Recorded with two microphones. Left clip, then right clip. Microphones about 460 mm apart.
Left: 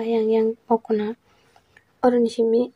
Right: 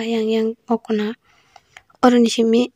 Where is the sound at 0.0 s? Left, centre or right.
Right.